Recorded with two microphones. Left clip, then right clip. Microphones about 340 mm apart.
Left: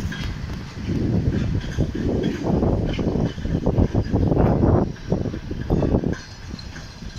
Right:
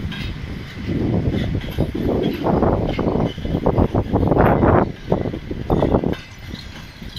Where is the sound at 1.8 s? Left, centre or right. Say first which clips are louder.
Right 4 dB; right.